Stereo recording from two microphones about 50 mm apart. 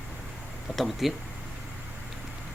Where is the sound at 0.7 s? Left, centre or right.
Centre.